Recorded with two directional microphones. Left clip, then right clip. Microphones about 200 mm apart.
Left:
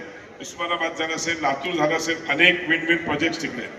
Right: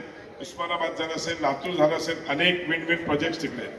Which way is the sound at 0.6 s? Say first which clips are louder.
Left 3 dB; 20° left (ahead or behind).